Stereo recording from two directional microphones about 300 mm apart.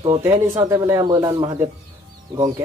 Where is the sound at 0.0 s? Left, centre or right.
Centre.